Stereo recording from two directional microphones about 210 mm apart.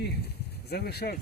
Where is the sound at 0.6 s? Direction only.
50° left (ahead or behind).